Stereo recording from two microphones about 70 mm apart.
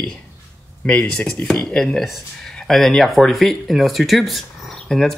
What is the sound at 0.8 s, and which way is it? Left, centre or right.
Speech, centre.